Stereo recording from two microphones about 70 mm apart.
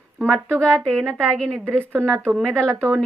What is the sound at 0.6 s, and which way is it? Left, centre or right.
Speech, centre.